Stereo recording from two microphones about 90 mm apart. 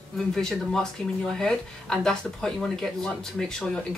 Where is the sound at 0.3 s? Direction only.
5° left (ahead or behind).